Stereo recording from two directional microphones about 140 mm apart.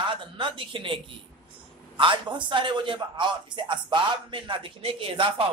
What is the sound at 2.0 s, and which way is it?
A man's voice, 35° right (ahead or behind).